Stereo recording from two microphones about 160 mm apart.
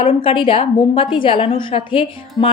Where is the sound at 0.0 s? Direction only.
35° left (ahead or behind).